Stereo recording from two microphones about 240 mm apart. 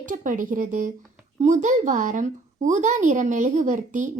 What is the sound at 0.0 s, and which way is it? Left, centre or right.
A child's voice, right.